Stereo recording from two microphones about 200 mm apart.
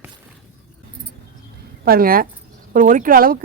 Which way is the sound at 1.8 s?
45° right (ahead or behind).